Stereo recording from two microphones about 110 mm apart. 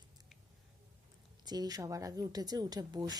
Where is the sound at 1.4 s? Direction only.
35° right (ahead or behind).